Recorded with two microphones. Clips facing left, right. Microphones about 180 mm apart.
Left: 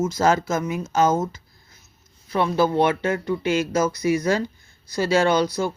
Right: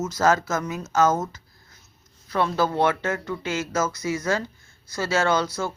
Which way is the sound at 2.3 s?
15° left (ahead or behind).